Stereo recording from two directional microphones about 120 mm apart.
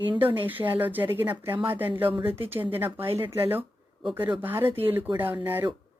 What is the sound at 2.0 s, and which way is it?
Speech, 45° right (ahead or behind).